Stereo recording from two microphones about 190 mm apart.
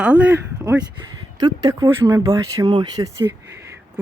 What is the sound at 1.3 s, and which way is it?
Speech, 20° right (ahead or behind).